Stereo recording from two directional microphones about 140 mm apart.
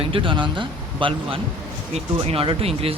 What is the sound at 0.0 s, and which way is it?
Speech, 35° right (ahead or behind).